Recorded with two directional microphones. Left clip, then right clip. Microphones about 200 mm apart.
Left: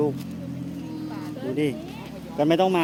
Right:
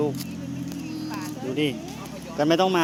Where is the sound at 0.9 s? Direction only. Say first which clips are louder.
Right 1 dB; 5° right (ahead or behind).